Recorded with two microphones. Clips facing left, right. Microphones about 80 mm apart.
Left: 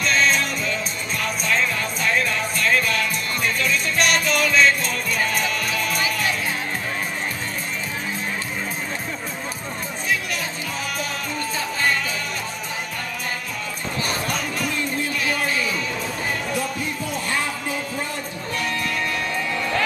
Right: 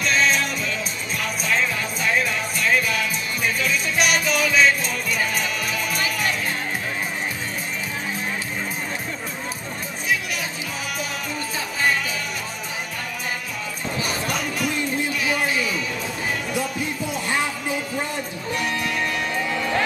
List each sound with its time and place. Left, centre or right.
0.0 s music: centre
11.5 s music: centre
14.0 s a sound: centre
15.2 s music: centre
17.1 s a sound: centre
18.5 s music: centre